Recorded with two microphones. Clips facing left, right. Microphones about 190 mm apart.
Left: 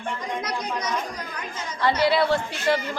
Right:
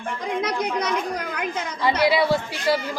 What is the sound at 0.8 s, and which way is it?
A woman's voice, 60° right (ahead or behind).